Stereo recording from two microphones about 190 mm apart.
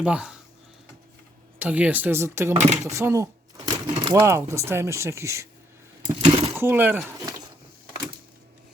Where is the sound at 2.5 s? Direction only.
35° right (ahead or behind).